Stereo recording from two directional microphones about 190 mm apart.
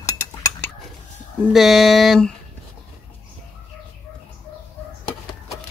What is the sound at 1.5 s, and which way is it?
Speech, centre (ahead or behind).